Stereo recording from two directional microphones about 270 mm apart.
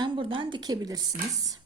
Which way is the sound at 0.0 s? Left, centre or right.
Centre.